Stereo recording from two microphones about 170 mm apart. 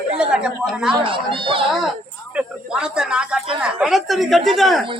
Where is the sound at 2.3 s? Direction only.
5° right (ahead or behind).